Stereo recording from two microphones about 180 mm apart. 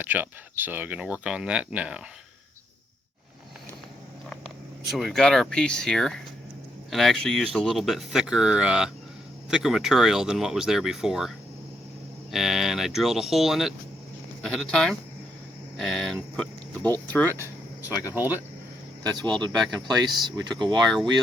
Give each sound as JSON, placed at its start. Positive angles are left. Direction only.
{"t": 0.0, "sound": "speech", "side_deg": -10}
{"t": 4.9, "sound": "speech", "side_deg": 0}
{"t": 12.3, "sound": "speech", "side_deg": 0}
{"t": 18.1, "sound": "speech", "side_deg": -10}
{"t": 19.1, "sound": "speech", "side_deg": -25}
{"t": 19.5, "sound": "speech", "side_deg": 0}
{"t": 20.2, "sound": "speech", "side_deg": -25}